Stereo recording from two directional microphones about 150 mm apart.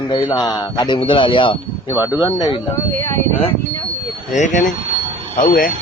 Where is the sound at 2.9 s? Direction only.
15° left (ahead or behind).